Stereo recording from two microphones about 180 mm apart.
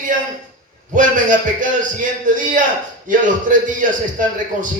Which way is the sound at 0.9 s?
45° right (ahead or behind).